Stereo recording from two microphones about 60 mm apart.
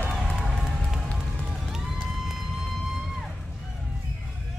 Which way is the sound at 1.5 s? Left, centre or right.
Centre.